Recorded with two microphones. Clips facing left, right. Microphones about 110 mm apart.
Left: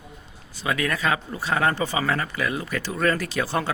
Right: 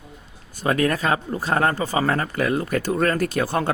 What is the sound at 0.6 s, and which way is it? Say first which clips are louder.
Speech: right 4 dB; 40° right (ahead or behind).